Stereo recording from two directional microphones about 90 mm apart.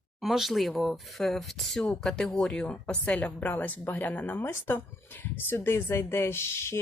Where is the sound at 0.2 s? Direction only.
Centre (ahead or behind).